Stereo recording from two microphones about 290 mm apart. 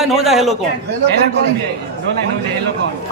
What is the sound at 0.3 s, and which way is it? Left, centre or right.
Speech, centre.